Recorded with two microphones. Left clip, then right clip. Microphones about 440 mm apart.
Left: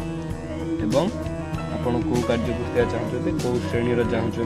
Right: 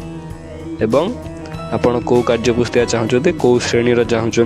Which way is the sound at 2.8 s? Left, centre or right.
Right.